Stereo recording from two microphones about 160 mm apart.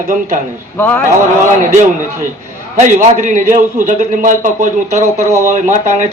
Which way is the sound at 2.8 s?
50° right (ahead or behind).